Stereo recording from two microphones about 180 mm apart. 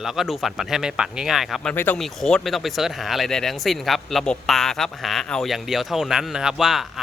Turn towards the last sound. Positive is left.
turn(degrees=0)  # may be behind; listen again after turning